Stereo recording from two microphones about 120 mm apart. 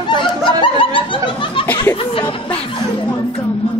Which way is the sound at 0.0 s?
40° left (ahead or behind).